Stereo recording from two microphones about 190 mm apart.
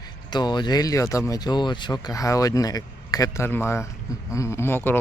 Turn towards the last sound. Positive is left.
turn(degrees=10)  # may be behind; listen again after turning